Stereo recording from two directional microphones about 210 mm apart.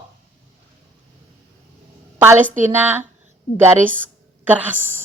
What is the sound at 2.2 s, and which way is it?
A woman's voice, 10° right (ahead or behind).